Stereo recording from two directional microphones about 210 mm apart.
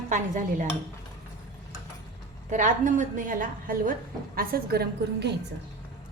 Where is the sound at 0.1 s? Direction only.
35° right (ahead or behind).